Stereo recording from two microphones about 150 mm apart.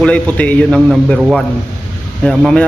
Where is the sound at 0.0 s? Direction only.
10° left (ahead or behind).